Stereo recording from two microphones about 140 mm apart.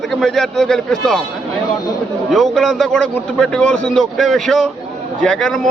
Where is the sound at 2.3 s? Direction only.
Centre (ahead or behind).